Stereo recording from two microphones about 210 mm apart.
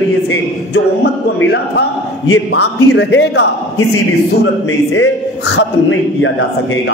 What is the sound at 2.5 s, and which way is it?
A man's voice, 50° left (ahead or behind).